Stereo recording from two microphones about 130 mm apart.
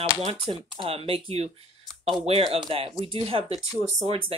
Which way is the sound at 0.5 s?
45° right (ahead or behind).